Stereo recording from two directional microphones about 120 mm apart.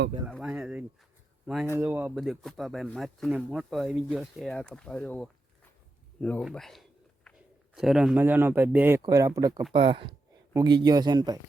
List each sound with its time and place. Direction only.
0.4 s speech: 10° right (ahead or behind)
2.1 s speech: centre (ahead or behind)
8.2 s speech: 20° right (ahead or behind)
9.0 s speech: 30° right (ahead or behind)
9.7 s speech: 50° right (ahead or behind)
10.5 s speech: 35° right (ahead or behind)